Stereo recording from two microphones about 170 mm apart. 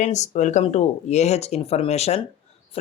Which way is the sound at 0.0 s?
45° left (ahead or behind).